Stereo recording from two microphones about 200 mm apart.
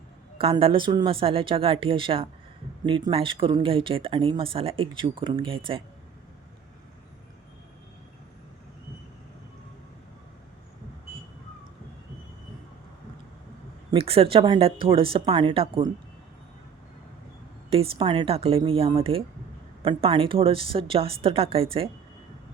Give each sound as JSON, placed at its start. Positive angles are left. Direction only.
{"t": 0.3, "sound": "speech", "side_deg": -25}
{"t": 13.9, "sound": "speech", "side_deg": -30}
{"t": 17.7, "sound": "speech", "side_deg": -25}